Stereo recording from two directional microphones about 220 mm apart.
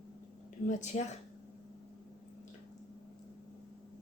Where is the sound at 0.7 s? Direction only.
30° left (ahead or behind).